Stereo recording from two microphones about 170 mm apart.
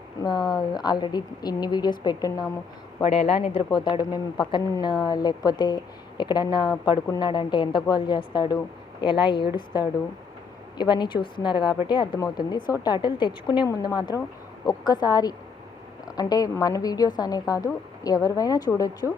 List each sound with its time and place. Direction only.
0.2 s a woman's voice: 25° left (ahead or behind)
3.0 s a woman's voice: 35° left (ahead or behind)
14.1 s speech: 15° right (ahead or behind)
14.7 s a woman's voice: 25° left (ahead or behind)